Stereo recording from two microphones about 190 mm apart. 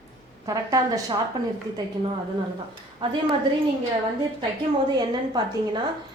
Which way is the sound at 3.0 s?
25° right (ahead or behind).